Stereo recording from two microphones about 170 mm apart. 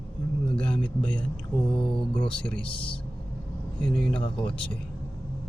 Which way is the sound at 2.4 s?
5° left (ahead or behind).